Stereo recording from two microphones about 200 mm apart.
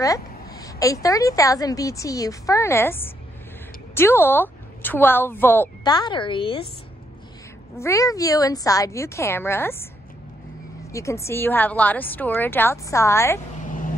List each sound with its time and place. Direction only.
0.0 s a sound: 15° left (ahead or behind)
1.0 s a woman's voice: 15° left (ahead or behind)
7.8 s a woman's voice: 15° left (ahead or behind)
10.9 s a woman's voice: 15° left (ahead or behind)
13.7 s vehicle: 40° left (ahead or behind)